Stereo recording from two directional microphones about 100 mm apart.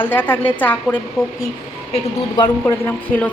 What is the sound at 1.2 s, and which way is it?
Speech, 5° right (ahead or behind).